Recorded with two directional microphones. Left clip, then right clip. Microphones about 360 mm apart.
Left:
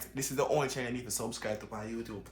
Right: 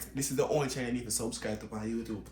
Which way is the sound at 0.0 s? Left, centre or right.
Centre.